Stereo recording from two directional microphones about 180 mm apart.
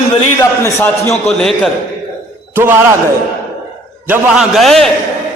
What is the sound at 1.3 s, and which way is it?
Speech, centre (ahead or behind).